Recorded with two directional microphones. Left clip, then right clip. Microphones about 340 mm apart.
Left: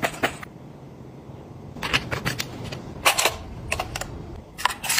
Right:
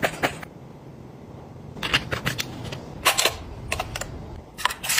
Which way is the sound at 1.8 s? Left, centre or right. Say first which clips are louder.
Right 1 dB; centre.